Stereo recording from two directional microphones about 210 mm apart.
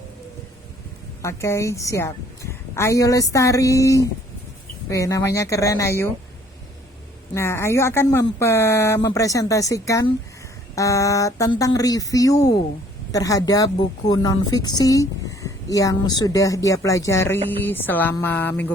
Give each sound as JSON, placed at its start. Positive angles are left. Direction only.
{"t": 1.2, "sound": "a woman's voice", "side_deg": 15}
{"t": 7.3, "sound": "a woman's voice", "side_deg": 10}